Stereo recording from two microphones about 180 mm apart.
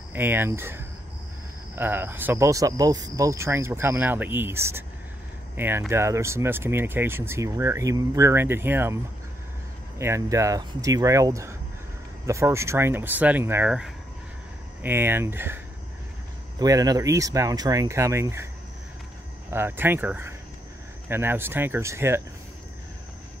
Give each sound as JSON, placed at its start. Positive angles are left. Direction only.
{"t": 0.1, "sound": "speech", "side_deg": -10}
{"t": 19.5, "sound": "speech", "side_deg": -10}